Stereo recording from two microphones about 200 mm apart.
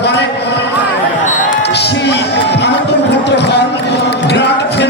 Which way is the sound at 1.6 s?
55° left (ahead or behind).